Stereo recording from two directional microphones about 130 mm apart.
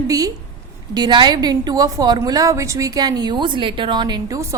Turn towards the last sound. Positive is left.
turn(degrees=-35)  # may be behind; listen again after turning